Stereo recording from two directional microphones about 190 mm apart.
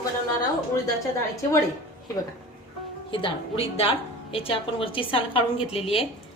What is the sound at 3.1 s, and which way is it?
A woman's voice, 30° left (ahead or behind).